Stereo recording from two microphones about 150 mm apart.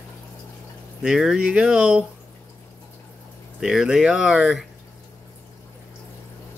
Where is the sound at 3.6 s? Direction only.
5° right (ahead or behind).